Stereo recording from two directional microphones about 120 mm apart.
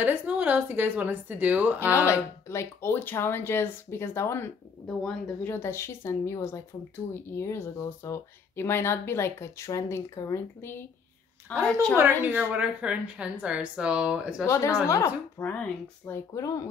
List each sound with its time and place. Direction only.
0.0 s a woman's voice: 15° right (ahead or behind)
1.8 s speech: 20° left (ahead or behind)
4.8 s speech: 5° left (ahead or behind)
5.5 s speech: 20° left (ahead or behind)
12.0 s a woman's voice: 15° right (ahead or behind)
14.4 s speech: 25° left (ahead or behind)
15.4 s speech: 15° left (ahead or behind)
16.3 s speech: 30° left (ahead or behind)